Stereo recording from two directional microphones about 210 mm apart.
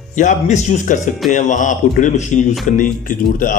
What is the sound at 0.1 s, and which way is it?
A man's voice, 35° left (ahead or behind).